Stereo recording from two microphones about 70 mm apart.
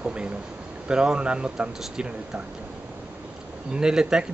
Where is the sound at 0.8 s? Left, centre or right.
Centre.